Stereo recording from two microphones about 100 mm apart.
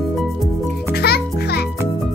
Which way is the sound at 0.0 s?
Centre (ahead or behind).